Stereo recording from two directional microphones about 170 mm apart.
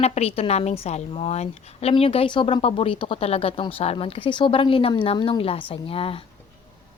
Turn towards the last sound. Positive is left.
turn(degrees=35)  # may be behind; listen again after turning